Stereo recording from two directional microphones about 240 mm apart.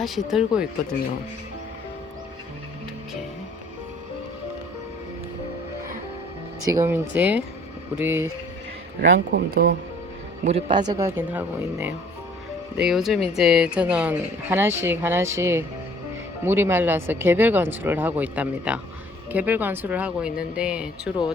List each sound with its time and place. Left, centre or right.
0.0 s speech: centre
6.7 s speech: centre
9.0 s a man's voice: right
10.4 s speech: right; by 21.1 s centre